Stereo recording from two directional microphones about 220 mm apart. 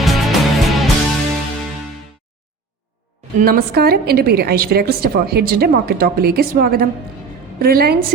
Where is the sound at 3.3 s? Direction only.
40° right (ahead or behind).